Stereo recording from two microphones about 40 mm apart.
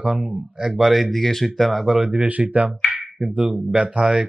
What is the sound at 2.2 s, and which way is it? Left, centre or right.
Speech, right.